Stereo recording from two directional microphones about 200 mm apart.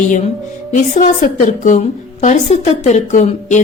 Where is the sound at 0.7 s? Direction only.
40° left (ahead or behind).